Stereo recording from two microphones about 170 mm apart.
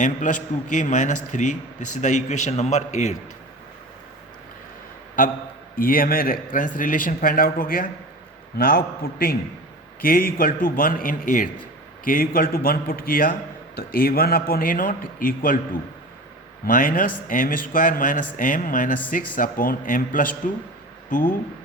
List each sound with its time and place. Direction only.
0.0 s a man's voice: 45° left (ahead or behind)
5.7 s a man's voice: 55° left (ahead or behind)